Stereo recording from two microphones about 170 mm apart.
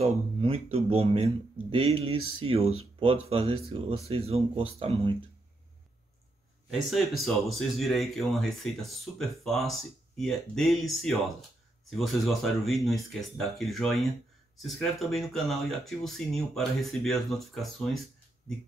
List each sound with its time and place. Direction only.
0.0 s speech: 35° right (ahead or behind)
6.7 s speech: centre (ahead or behind)